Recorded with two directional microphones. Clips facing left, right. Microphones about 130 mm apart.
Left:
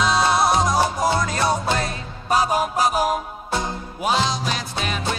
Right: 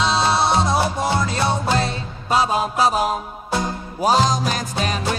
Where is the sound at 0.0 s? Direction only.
30° right (ahead or behind).